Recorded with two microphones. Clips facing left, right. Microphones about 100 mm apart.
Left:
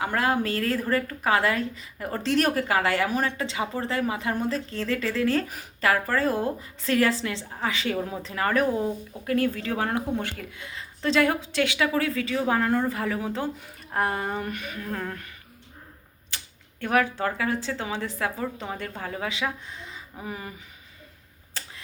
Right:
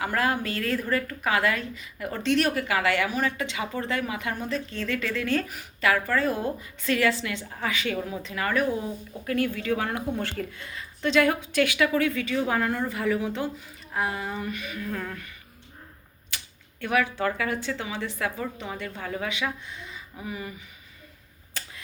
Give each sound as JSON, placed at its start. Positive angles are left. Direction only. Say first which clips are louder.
{"t": 0.0, "sound": "a woman's voice", "louder": "left 1 dB", "side_deg": 25}
{"t": 10.6, "sound": "speech", "louder": "even", "side_deg": 20}
{"t": 11.0, "sound": "a woman's voice", "louder": "even", "side_deg": 30}
{"t": 13.6, "sound": "speech", "louder": "left 3 dB", "side_deg": 50}
{"t": 14.8, "sound": "speech", "louder": "left 1 dB", "side_deg": 20}
{"t": 16.3, "sound": "typewriter", "louder": "even", "side_deg": 30}
{"t": 16.8, "sound": "a woman's voice", "louder": "left 2 dB", "side_deg": 35}
{"t": 17.2, "sound": "a woman's voice", "louder": "even", "side_deg": 25}